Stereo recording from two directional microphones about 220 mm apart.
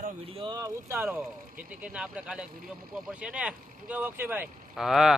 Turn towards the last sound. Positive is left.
turn(degrees=0)  # may be behind; listen again after turning